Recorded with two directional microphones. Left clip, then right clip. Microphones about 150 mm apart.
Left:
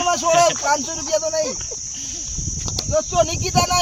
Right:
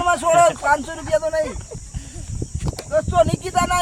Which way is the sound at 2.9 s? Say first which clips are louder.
Right 2 dB; 20° left (ahead or behind).